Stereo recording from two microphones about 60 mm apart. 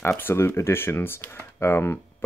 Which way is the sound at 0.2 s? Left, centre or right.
Left.